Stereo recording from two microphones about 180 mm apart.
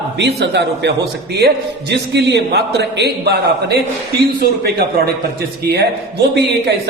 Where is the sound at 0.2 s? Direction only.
70° right (ahead or behind).